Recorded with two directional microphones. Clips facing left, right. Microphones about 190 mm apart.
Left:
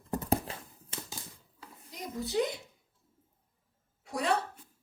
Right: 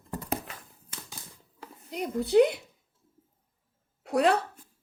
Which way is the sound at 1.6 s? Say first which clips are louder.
Right 10 dB; 65° right (ahead or behind).